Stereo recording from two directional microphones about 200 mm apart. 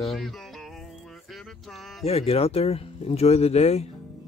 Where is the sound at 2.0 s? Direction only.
30° left (ahead or behind).